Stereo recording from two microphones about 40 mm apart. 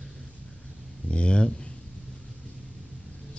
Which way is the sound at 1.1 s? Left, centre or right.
Left.